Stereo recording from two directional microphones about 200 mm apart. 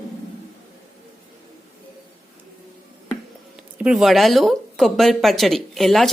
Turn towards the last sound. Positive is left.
turn(degrees=0)  # may be behind; listen again after turning